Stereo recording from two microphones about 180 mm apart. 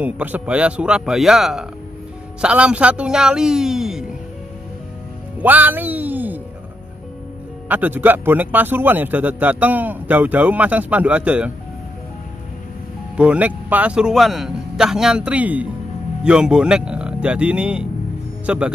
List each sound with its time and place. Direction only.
0.0 s a man's voice: 10° right (ahead or behind)
5.4 s music: 10° right (ahead or behind)
7.6 s speech: 10° right (ahead or behind)
13.1 s a man's voice: 5° right (ahead or behind)